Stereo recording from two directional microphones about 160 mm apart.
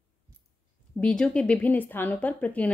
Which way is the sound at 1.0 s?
5° left (ahead or behind).